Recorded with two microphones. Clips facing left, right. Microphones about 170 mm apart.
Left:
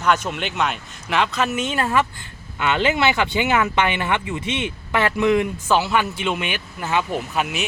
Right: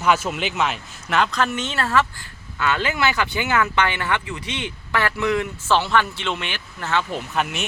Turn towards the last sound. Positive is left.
turn(degrees=5)  # may be behind; listen again after turning